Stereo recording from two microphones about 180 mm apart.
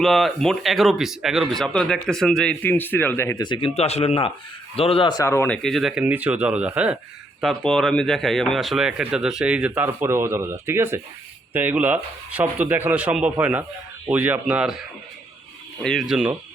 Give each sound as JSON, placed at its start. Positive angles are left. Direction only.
{"t": 0.0, "sound": "speech", "side_deg": 0}
{"t": 3.4, "sound": "speech", "side_deg": 30}
{"t": 5.6, "sound": "speech", "side_deg": 0}